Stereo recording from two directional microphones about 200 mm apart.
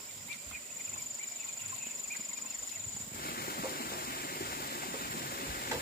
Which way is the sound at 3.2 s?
50° left (ahead or behind).